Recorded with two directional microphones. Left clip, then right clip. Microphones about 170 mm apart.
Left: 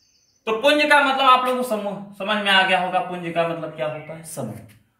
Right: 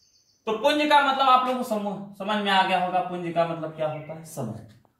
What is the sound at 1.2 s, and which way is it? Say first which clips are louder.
A man's voice: left 4 dB; 5° left (ahead or behind).